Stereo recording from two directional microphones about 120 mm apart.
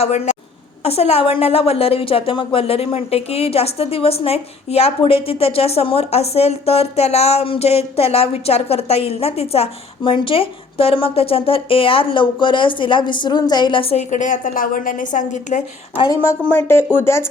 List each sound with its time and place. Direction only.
0.0 s a woman's voice: 65° left (ahead or behind); by 14.0 s 50° left (ahead or behind)
14.1 s a woman's voice: 90° left
16.0 s speech: 25° left (ahead or behind)